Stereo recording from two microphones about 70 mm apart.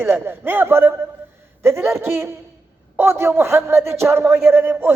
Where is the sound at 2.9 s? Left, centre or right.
Right.